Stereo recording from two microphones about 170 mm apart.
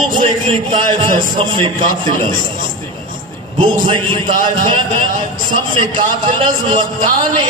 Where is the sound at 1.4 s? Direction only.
30° right (ahead or behind).